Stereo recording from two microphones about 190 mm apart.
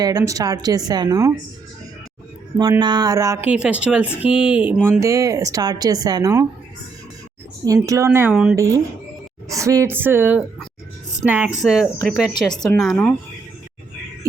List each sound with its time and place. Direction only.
0.0 s a woman's voice: 20° right (ahead or behind)
2.6 s speech: 20° right (ahead or behind)
7.6 s speech: 15° right (ahead or behind)
8.5 s speech: 15° right (ahead or behind)
12.3 s speech: 20° left (ahead or behind)